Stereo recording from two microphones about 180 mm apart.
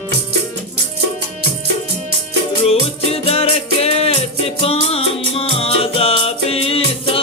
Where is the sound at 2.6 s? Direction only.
35° left (ahead or behind).